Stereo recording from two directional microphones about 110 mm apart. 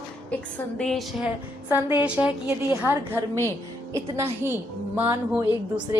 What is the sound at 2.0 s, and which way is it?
A woman's voice, 10° right (ahead or behind).